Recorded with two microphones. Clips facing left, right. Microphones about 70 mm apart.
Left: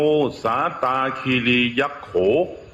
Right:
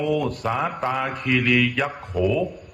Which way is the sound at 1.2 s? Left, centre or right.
Centre.